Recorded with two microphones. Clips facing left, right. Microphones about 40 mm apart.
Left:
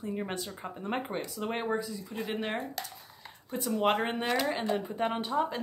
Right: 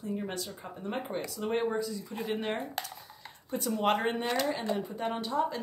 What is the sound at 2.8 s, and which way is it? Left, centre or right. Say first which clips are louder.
Speech: right 2 dB; right.